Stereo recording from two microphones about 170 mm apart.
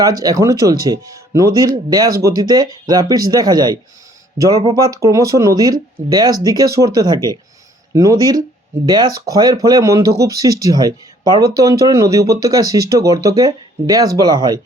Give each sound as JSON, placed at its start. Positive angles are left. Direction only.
{"t": 0.0, "sound": "speech", "side_deg": -20}